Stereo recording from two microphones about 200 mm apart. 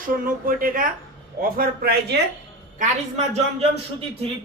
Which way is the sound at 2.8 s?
35° right (ahead or behind).